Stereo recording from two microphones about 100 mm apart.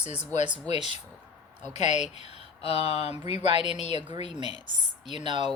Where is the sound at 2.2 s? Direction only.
85° left.